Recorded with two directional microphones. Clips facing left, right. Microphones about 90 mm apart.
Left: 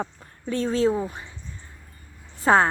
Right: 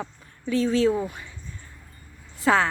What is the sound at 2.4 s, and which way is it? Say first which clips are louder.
Speech: left 2 dB; 35° left (ahead or behind).